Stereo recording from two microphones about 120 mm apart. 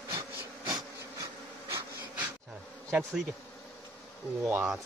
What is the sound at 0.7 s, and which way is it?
Bee, 30° right (ahead or behind).